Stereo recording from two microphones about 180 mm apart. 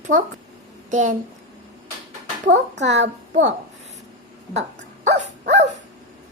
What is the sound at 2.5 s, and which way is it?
Speech, 85° right.